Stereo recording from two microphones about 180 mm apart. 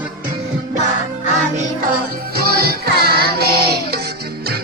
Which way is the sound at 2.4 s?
60° right (ahead or behind).